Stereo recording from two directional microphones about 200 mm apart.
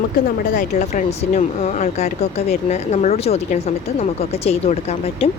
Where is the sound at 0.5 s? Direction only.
35° left (ahead or behind).